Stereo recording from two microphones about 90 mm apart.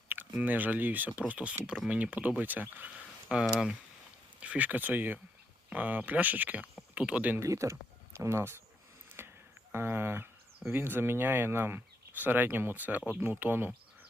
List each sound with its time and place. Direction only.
0.3 s speech: 20° right (ahead or behind)
3.2 s speech: 10° right (ahead or behind)
7.3 s speech: 35° right (ahead or behind)
9.2 s a sound: 25° right (ahead or behind)
9.7 s speech: 25° right (ahead or behind)